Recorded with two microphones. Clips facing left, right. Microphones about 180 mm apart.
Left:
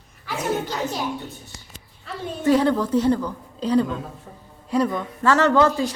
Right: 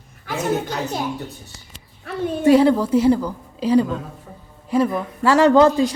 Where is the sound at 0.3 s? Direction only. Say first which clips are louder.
Right 3 dB; 50° right (ahead or behind).